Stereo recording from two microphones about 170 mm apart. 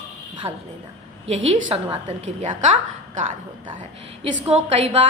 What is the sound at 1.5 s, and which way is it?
Speech, 35° right (ahead or behind).